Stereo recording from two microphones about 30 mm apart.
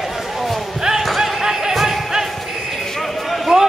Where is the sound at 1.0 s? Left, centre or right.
Centre.